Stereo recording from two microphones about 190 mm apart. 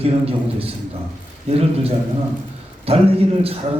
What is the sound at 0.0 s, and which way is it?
A man's voice, 30° right (ahead or behind).